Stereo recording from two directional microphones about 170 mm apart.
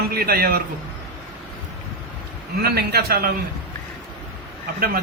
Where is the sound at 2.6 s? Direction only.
70° right (ahead or behind).